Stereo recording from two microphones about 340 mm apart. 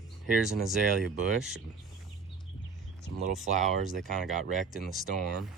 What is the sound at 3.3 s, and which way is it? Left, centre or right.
Speech, right.